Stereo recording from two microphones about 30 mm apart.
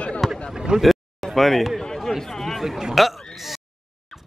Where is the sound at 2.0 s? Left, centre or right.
Centre.